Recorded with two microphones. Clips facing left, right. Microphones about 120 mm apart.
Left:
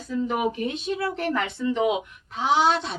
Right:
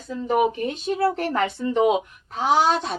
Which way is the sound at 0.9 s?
40° right (ahead or behind).